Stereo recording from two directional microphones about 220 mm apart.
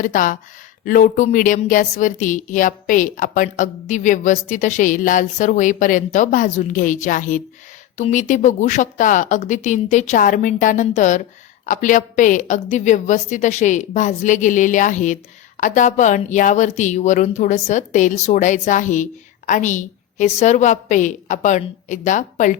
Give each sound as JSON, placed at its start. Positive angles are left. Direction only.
{"t": 0.0, "sound": "a woman's voice", "side_deg": 35}